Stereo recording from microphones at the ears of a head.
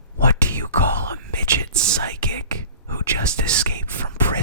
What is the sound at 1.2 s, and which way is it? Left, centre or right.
Whispering, right.